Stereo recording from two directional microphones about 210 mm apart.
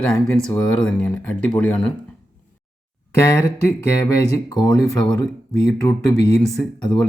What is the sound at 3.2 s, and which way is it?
Speech, 15° left (ahead or behind).